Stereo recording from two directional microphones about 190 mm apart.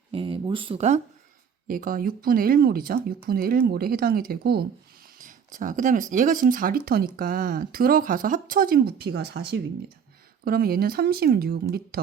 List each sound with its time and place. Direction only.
0.1 s speech: 30° right (ahead or behind)
1.6 s speech: 45° right (ahead or behind)